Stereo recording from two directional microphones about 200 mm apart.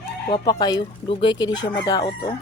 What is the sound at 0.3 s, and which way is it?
Speech, 20° left (ahead or behind).